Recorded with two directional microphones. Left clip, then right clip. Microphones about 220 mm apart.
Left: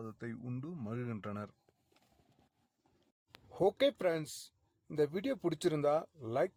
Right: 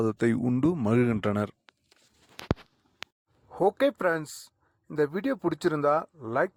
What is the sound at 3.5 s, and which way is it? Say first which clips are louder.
Speech: right 7 dB; 15° right (ahead or behind).